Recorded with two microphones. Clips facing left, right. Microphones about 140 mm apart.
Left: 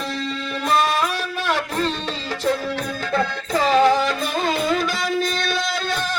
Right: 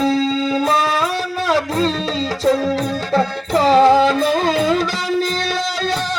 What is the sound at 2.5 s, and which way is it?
Music, 35° right (ahead or behind).